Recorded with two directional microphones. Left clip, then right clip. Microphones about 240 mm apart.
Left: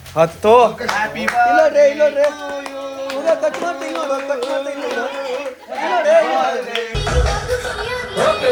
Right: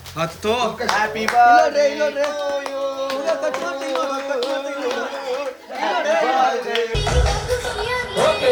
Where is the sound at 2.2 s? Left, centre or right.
Right.